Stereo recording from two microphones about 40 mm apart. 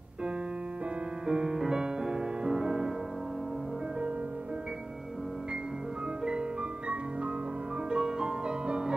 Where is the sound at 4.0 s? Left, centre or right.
Right.